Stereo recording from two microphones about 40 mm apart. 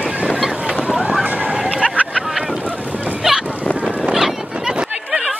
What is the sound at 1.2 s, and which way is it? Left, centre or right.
Slosh, right.